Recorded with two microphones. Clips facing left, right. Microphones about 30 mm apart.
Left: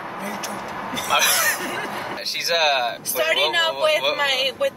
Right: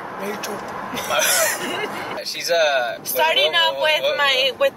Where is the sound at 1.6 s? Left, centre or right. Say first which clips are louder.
Right 2 dB; right.